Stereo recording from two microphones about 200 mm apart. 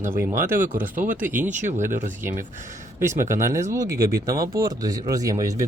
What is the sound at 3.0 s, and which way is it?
Speech, 15° right (ahead or behind).